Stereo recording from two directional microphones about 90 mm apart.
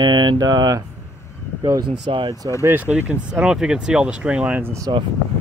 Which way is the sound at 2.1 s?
90° right.